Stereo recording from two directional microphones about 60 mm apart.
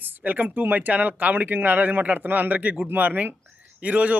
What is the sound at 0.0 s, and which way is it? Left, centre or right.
A man's voice, right.